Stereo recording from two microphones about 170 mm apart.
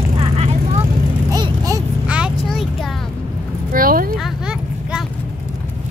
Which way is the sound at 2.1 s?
5° right (ahead or behind).